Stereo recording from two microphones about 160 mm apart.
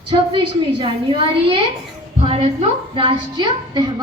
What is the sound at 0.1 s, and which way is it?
Speech, 35° right (ahead or behind).